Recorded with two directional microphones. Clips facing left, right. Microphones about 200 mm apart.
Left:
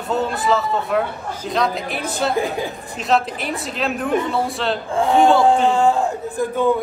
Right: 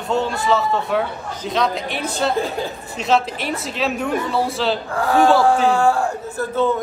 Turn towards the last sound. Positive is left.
turn(degrees=15)  # may be behind; listen again after turning